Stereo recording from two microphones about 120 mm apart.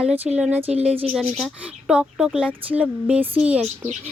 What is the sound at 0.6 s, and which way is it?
Speech, 55° right (ahead or behind).